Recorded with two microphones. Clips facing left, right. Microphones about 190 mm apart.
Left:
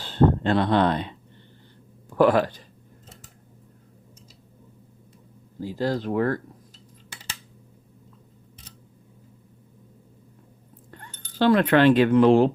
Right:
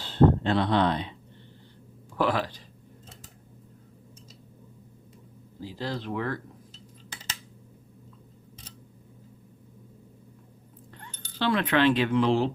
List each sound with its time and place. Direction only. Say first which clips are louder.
0.0 s speech: left 1 dB; 50° left (ahead or behind)
2.1 s speech: left 8 dB; 50° left (ahead or behind)
5.6 s speech: left 7 dB; 45° left (ahead or behind)
10.9 s speech: left 7 dB; 45° left (ahead or behind)